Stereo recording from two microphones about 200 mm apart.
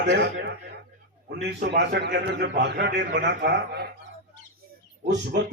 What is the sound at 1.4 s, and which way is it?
A man's voice, 55° right (ahead or behind).